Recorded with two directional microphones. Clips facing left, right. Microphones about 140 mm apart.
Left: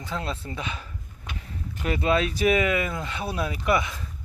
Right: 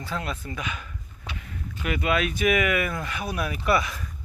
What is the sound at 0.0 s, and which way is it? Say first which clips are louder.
Speech: even; 25° left (ahead or behind).